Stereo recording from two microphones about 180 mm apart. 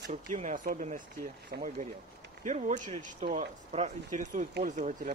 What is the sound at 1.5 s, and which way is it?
Speech, 60° right (ahead or behind).